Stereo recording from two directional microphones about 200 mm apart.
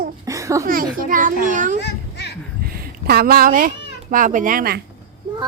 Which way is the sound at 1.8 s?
55° left (ahead or behind).